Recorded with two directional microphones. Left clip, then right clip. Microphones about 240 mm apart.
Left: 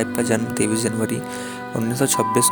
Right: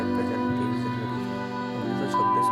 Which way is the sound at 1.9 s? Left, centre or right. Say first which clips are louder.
Left 3 dB; left.